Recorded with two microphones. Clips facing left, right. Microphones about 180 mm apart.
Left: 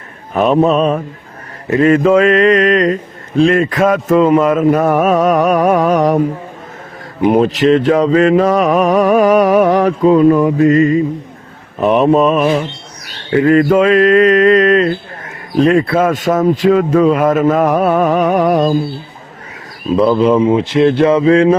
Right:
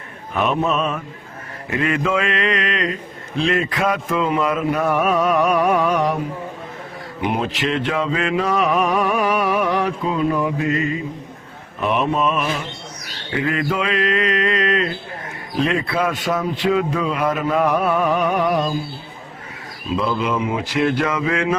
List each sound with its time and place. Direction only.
0.3 s speech: 35° left (ahead or behind)
1.7 s mantra: 40° left (ahead or behind)
11.8 s speech: 40° left (ahead or behind)
13.3 s mantra: 45° left (ahead or behind)
20.0 s speech: 35° left (ahead or behind)